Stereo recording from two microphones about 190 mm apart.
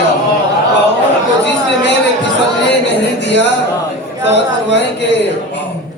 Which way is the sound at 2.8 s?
65° left (ahead or behind).